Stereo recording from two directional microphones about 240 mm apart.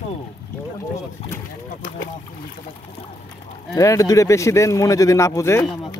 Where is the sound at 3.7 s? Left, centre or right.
Centre.